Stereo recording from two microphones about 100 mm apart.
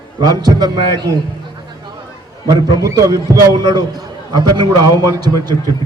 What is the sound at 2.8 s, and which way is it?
A man's voice, 35° right (ahead or behind).